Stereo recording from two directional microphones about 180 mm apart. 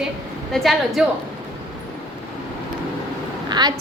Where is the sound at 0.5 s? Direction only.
Centre (ahead or behind).